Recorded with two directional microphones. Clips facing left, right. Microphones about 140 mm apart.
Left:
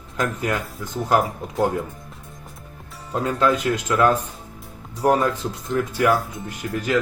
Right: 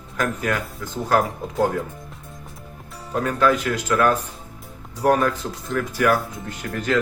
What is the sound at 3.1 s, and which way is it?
Speech, 25° left (ahead or behind).